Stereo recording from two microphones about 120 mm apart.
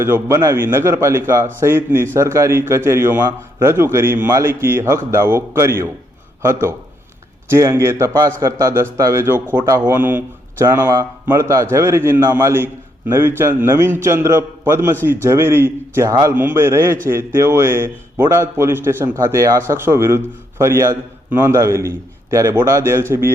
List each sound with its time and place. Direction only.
0.0 s a man's voice: 20° right (ahead or behind)